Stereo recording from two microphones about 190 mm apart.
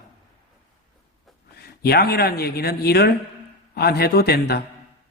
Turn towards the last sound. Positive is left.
turn(degrees=55)  # may be behind; listen again after turning